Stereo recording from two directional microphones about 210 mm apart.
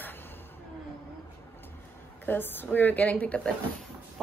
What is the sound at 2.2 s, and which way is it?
A woman's voice, 10° left (ahead or behind).